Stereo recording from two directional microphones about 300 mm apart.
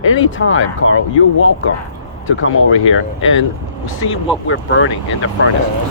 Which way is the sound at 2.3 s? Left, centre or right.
Left.